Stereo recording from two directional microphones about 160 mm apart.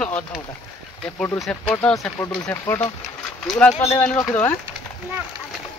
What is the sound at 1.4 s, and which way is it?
Speech, 5° left (ahead or behind).